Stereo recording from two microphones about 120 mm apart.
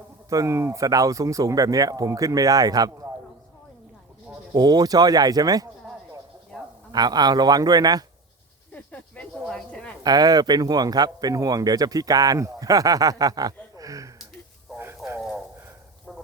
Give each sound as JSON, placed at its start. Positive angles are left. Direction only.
{"t": 0.3, "sound": "speech", "side_deg": -25}
{"t": 4.5, "sound": "speech", "side_deg": -35}
{"t": 6.5, "sound": "insect", "side_deg": 10}
{"t": 6.9, "sound": "speech", "side_deg": -35}
{"t": 8.7, "sound": "snake", "side_deg": 10}
{"t": 10.0, "sound": "speech", "side_deg": -35}
{"t": 14.8, "sound": "a sound", "side_deg": -20}
{"t": 16.1, "sound": "a sound", "side_deg": 5}